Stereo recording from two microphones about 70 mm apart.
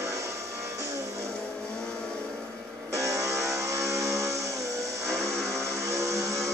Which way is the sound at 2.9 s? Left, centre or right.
Right.